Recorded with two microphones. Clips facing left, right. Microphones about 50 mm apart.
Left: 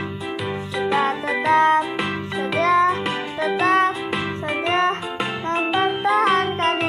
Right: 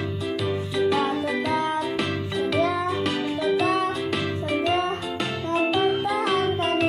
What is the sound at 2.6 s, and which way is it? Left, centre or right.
Music, left.